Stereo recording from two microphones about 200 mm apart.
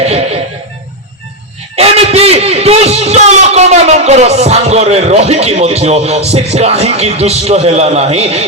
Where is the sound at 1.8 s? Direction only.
30° right (ahead or behind).